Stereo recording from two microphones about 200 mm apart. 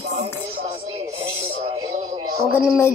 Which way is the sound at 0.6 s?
30° right (ahead or behind).